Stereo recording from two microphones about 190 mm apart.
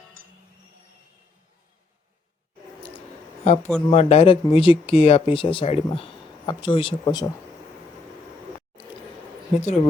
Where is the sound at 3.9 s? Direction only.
35° left (ahead or behind).